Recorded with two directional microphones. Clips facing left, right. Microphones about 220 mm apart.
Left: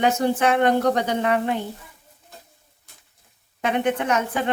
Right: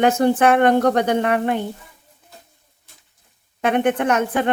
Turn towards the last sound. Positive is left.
turn(degrees=-55)  # may be behind; listen again after turning